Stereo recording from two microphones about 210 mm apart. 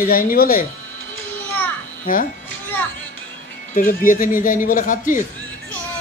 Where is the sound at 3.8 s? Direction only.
40° left (ahead or behind).